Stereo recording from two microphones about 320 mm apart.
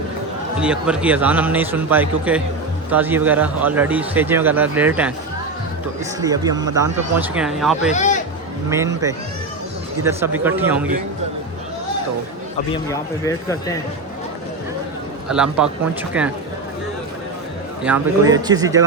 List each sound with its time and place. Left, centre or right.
0.6 s speech: centre
6.1 s a man's voice: centre
7.9 s speech: left
8.7 s a man's voice: centre
12.7 s a man's voice: centre
15.3 s speech: centre
17.8 s a man's voice: centre